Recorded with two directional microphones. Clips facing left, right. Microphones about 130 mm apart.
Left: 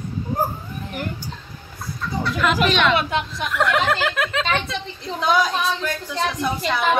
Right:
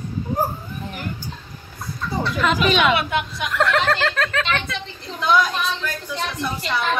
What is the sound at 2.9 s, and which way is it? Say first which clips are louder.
Speech: even; 35° left (ahead or behind).